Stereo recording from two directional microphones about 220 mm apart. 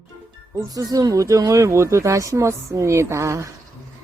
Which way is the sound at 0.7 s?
15° right (ahead or behind).